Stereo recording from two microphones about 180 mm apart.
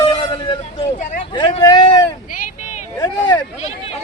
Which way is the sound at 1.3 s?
25° left (ahead or behind).